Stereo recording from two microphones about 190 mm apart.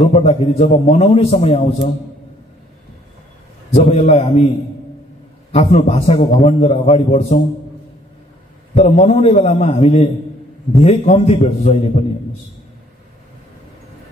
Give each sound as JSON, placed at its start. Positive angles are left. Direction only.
{"t": 0.0, "sound": "a man's voice", "side_deg": 30}
{"t": 3.7, "sound": "a man's voice", "side_deg": 40}
{"t": 5.5, "sound": "a man's voice", "side_deg": 35}
{"t": 8.7, "sound": "a man's voice", "side_deg": 35}